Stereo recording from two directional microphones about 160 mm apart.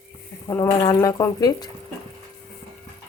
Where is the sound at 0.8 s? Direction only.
25° left (ahead or behind).